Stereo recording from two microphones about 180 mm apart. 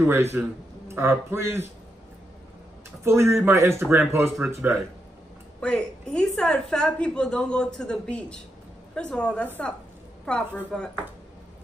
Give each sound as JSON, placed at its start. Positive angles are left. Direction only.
{"t": 0.0, "sound": "a man's voice", "side_deg": -15}
{"t": 3.0, "sound": "a man's voice", "side_deg": -15}
{"t": 5.6, "sound": "a woman's voice", "side_deg": 5}